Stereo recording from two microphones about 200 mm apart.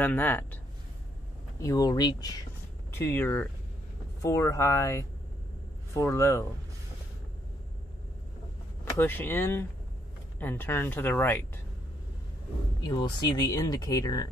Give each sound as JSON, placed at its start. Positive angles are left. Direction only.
{"t": 0.0, "sound": "speech", "side_deg": 10}
{"t": 1.6, "sound": "speech", "side_deg": 15}
{"t": 8.9, "sound": "speech", "side_deg": 10}
{"t": 12.8, "sound": "speech", "side_deg": 20}